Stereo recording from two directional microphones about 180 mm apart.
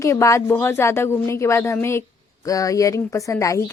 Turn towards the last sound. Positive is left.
turn(degrees=15)  # may be behind; listen again after turning